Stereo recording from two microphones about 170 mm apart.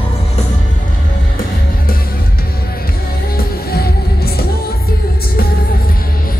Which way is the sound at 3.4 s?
65° left (ahead or behind).